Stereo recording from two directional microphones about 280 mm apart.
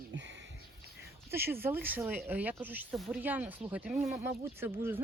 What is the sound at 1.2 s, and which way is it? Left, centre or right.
Speech, centre.